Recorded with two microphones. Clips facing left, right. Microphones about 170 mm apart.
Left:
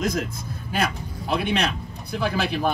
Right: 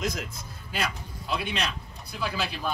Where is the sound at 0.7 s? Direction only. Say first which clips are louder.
Left 6 dB; 55° left (ahead or behind).